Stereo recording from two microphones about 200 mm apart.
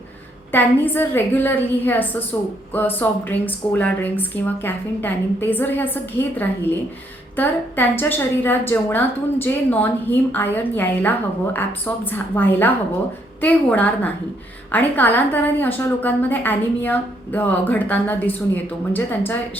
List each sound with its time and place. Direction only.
0.5 s a woman's voice: 10° left (ahead or behind)
12.1 s a woman's voice: 10° left (ahead or behind)